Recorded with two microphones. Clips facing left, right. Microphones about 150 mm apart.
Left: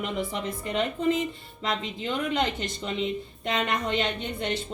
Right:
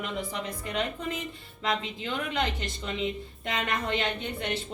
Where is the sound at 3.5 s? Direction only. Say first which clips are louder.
Left 3 dB; 20° left (ahead or behind).